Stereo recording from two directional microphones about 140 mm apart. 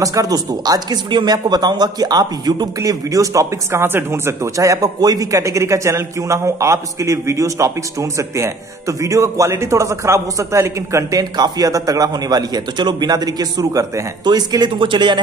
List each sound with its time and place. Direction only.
0.0 s speech: 25° right (ahead or behind)